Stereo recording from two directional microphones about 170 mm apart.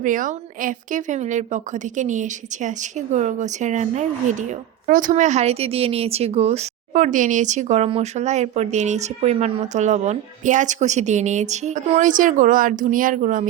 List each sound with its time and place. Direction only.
0.0 s a woman's voice: 50° right (ahead or behind)